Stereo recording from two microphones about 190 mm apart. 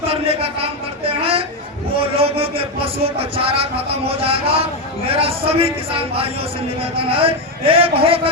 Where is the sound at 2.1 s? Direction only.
30° right (ahead or behind).